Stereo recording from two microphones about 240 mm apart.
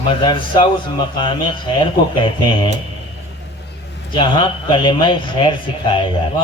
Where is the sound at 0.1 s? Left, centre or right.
Left.